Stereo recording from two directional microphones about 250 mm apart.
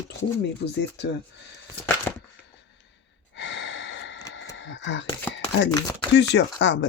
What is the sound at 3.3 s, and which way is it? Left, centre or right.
Gasp, left.